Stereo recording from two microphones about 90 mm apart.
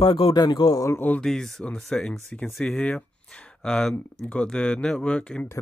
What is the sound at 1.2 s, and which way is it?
Speech, 5° left (ahead or behind).